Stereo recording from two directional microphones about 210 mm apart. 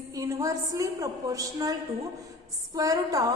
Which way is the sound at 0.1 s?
15° right (ahead or behind).